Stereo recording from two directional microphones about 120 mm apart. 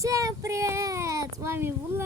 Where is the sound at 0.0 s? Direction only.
30° right (ahead or behind).